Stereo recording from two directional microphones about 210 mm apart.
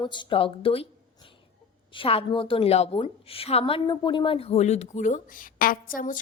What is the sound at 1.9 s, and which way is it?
A woman's voice, 25° left (ahead or behind).